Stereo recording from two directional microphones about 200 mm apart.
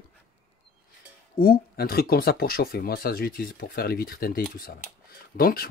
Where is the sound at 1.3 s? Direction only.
50° left (ahead or behind).